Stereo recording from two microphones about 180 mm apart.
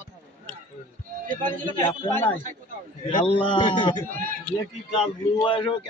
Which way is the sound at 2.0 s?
15° left (ahead or behind).